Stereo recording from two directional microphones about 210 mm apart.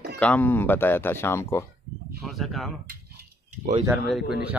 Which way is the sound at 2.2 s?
Centre (ahead or behind).